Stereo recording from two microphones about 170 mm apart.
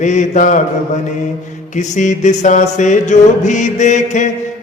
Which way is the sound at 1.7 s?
45° left (ahead or behind).